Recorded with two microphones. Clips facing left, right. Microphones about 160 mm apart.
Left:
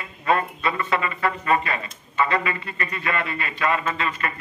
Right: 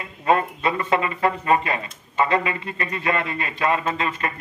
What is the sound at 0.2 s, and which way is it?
Speech, 25° right (ahead or behind).